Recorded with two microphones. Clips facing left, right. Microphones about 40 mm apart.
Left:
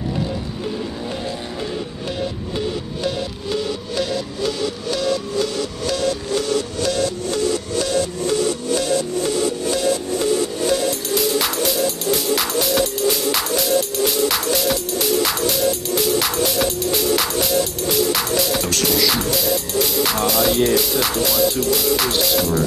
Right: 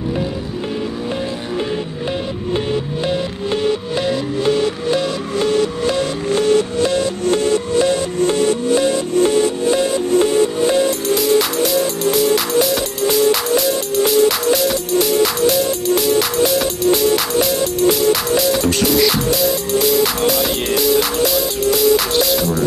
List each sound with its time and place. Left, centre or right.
2.5 s music: right
6.3 s music: right
7.2 s music: right
8.7 s music: right
10.9 s music: centre